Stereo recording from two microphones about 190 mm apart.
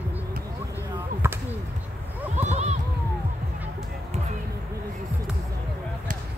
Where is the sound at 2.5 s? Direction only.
35° right (ahead or behind).